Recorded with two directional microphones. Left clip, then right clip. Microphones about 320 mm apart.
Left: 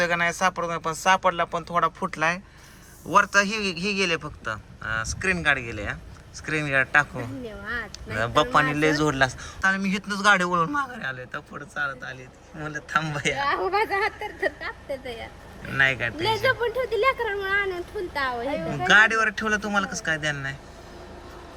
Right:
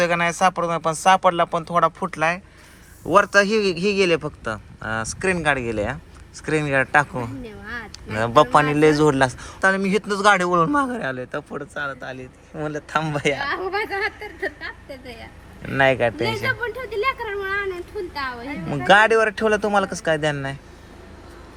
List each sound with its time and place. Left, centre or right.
0.0 s speech: centre
13.7 s a woman's voice: centre
15.7 s speech: centre
16.2 s a woman's voice: left
18.7 s speech: centre